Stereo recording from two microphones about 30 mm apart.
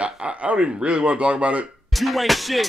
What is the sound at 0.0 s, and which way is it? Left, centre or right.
Speech, right.